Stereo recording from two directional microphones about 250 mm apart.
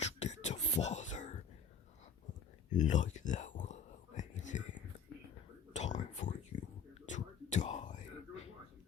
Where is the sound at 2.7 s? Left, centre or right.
Left.